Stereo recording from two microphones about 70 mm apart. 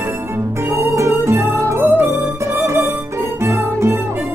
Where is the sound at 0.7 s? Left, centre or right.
Right.